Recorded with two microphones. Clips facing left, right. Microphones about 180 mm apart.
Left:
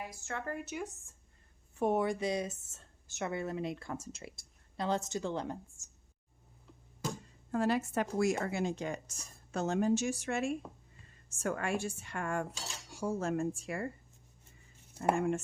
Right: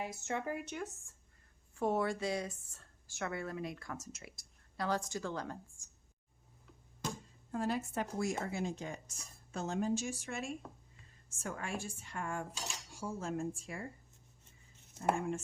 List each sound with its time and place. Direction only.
0.0 s a woman's voice: 20° right (ahead or behind)
0.5 s speech: 5° left (ahead or behind)
1.7 s a woman's voice: 20° left (ahead or behind)
7.5 s a woman's voice: 75° left (ahead or behind)